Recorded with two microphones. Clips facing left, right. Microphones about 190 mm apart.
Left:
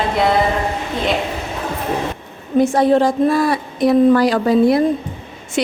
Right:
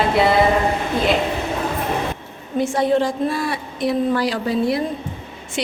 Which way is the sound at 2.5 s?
40° left (ahead or behind).